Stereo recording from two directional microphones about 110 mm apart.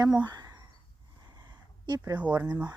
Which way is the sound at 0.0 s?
35° right (ahead or behind).